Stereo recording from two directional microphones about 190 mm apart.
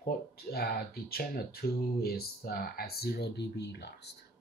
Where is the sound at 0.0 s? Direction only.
55° left (ahead or behind).